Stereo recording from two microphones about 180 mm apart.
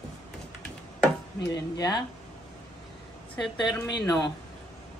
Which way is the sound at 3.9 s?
25° left (ahead or behind).